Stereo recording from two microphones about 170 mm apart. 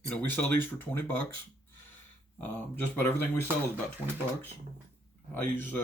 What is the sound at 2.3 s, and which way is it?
Speech, 10° left (ahead or behind).